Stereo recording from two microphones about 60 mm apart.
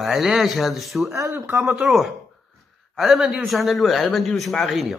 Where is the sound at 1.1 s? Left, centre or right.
Right.